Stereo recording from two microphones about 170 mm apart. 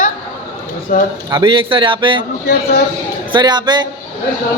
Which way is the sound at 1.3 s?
30° right (ahead or behind).